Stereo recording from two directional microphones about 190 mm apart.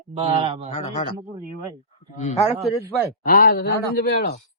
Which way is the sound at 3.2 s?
50° left (ahead or behind).